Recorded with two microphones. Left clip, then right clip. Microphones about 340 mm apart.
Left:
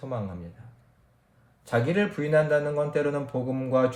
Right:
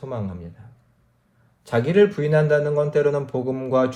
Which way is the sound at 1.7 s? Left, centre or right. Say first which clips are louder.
Right 8 dB; centre.